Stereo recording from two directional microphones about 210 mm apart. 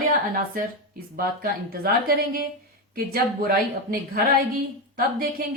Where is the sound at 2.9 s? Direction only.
45° right (ahead or behind).